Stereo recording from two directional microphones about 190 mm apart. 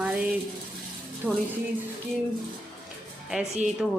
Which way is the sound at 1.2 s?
5° left (ahead or behind).